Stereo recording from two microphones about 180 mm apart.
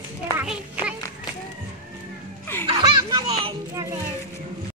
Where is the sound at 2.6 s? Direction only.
25° right (ahead or behind).